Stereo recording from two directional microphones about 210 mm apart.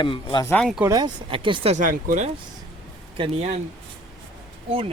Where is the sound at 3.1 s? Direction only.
25° right (ahead or behind).